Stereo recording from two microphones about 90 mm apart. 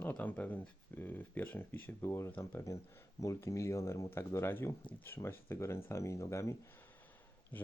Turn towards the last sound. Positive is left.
turn(degrees=20)  # may be behind; listen again after turning